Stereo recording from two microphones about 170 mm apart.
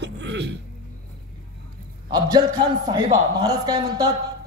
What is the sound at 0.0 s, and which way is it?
Throat clearing, 90° right.